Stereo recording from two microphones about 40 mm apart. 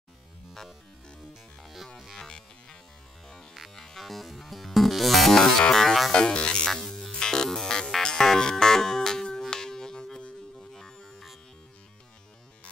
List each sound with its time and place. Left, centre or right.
2.1 s music: centre
3.7 s music: centre
6.1 s music: left; by 11.3 s centre